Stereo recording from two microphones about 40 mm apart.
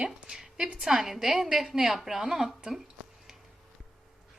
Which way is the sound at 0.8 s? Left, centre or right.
Centre.